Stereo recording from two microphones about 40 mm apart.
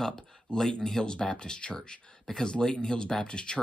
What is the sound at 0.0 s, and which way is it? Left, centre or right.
Speech, centre.